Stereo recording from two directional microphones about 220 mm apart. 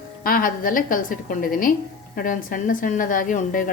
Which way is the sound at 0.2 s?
40° left (ahead or behind).